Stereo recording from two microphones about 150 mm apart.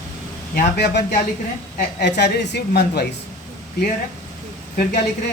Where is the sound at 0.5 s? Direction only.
90° left.